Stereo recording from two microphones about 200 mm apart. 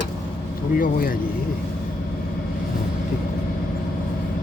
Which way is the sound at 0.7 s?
45° left (ahead or behind).